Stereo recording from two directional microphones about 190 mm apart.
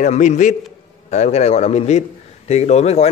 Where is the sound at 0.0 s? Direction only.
40° left (ahead or behind).